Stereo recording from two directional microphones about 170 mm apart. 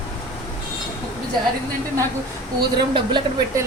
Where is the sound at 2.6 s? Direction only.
25° right (ahead or behind).